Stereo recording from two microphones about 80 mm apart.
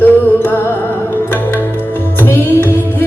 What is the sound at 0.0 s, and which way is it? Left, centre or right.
Music, left.